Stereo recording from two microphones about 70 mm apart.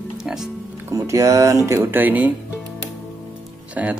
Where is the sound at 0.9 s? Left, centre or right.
Right.